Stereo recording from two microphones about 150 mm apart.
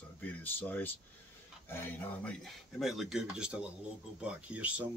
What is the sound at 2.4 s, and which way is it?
Speech, centre (ahead or behind).